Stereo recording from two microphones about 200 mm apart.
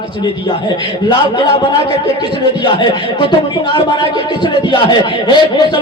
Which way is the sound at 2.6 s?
20° left (ahead or behind).